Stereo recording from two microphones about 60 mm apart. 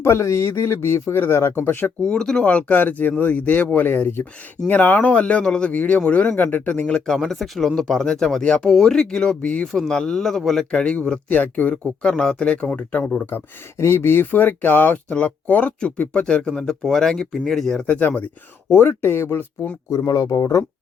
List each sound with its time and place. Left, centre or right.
0.0 s speech: left
2.0 s speech: centre; by 4.3 s left
4.7 s speech: left
6.9 s speech: centre
11.3 s speech: left
11.7 s speech: centre
13.3 s speech: left
13.7 s speech: left
14.3 s speech: left
16.8 s speech: centre
17.8 s speech: left
18.7 s speech: left
20.1 s speech: left